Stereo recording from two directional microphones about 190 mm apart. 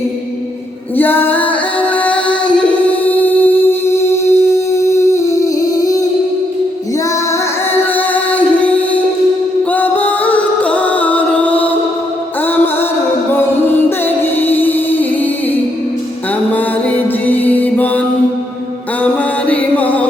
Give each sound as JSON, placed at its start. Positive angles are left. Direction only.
{"t": 0.9, "sound": "music", "side_deg": 10}
{"t": 7.7, "sound": "music", "side_deg": 10}
{"t": 14.0, "sound": "music", "side_deg": 10}
{"t": 17.2, "sound": "music", "side_deg": 10}
{"t": 19.5, "sound": "music", "side_deg": 10}